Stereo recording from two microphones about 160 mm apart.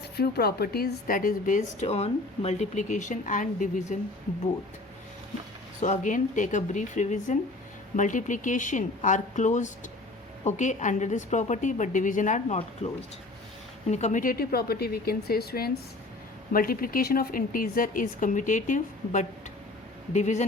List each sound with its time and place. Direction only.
0.2 s speech: 75° left (ahead or behind); by 3.9 s 55° left (ahead or behind)
5.8 s speech: 50° left (ahead or behind)
12.5 s speech: 40° left (ahead or behind); by 15.8 s 75° left (ahead or behind)
16.5 s a woman's voice: 65° left (ahead or behind); by 20.4 s 45° left (ahead or behind)